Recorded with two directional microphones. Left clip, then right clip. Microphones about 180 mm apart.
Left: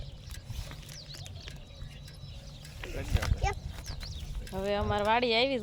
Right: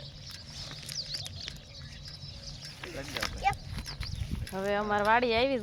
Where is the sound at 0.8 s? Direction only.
25° left (ahead or behind).